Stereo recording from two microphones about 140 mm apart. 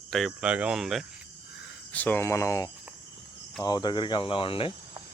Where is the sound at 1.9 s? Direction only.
10° left (ahead or behind); by 4.7 s 40° left (ahead or behind).